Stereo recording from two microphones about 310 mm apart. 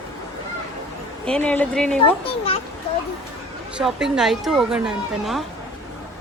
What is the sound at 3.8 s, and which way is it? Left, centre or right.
Speech, centre.